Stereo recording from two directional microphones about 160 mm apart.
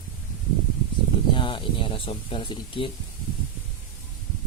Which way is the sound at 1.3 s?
30° left (ahead or behind).